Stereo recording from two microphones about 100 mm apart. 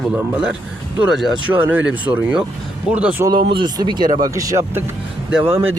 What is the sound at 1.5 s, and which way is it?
Speech, 15° right (ahead or behind).